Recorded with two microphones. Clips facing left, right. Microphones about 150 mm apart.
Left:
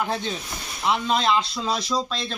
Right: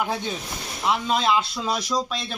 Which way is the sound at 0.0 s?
10° right (ahead or behind).